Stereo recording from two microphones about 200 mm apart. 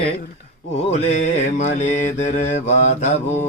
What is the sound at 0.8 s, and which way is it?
Mantra, 35° left (ahead or behind).